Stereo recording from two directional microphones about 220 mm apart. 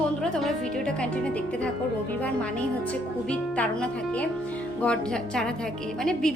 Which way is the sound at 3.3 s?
5° left (ahead or behind).